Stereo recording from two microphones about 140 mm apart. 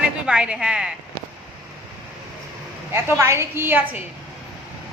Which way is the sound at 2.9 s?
15° right (ahead or behind).